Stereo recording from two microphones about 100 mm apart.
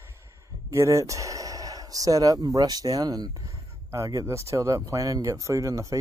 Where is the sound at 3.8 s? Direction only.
30° right (ahead or behind).